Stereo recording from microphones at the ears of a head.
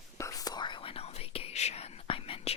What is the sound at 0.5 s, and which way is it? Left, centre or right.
Whispering, left.